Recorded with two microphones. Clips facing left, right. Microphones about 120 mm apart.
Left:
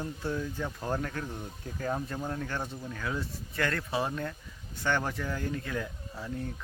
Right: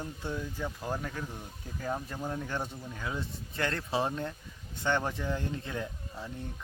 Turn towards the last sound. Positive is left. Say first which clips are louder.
# even
turn(degrees=-25)  # may be behind; listen again after turning